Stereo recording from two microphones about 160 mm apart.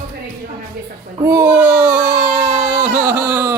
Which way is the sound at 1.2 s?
10° right (ahead or behind).